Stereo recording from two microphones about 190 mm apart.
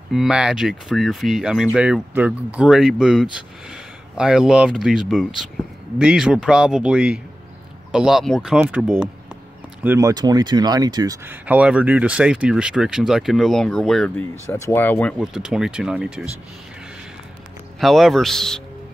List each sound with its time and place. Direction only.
0.1 s speech: 5° right (ahead or behind)
9.8 s speech: 15° right (ahead or behind)
11.2 s speech: 10° right (ahead or behind); by 15.1 s 10° left (ahead or behind)
15.1 s speech: 5° right (ahead or behind)
17.7 s speech: centre (ahead or behind)